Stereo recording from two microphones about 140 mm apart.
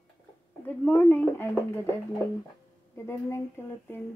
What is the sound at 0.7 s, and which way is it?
Speech, 15° left (ahead or behind).